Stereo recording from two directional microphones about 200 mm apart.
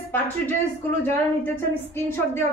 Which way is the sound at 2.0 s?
10° left (ahead or behind).